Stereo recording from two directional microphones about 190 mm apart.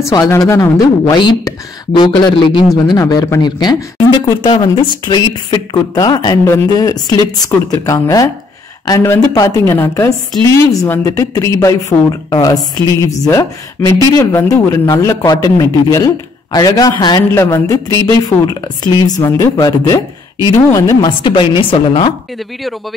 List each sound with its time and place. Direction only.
0.0 s speech: 15° left (ahead or behind)